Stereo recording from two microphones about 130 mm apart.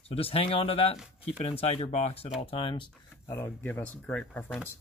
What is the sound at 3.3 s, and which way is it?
Speech, 15° left (ahead or behind).